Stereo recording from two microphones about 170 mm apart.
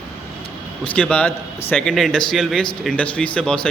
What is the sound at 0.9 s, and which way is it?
Speech, 5° left (ahead or behind).